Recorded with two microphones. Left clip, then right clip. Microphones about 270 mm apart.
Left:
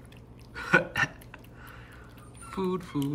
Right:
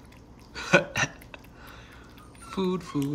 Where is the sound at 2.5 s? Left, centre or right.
Centre.